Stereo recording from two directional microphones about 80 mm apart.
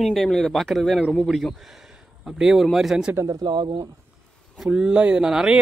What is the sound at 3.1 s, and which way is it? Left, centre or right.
Speech, right.